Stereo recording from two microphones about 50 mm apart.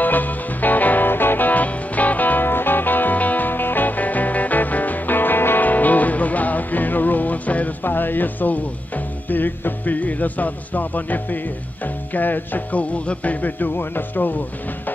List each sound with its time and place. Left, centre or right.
0.0 s music: left
7.8 s speech: left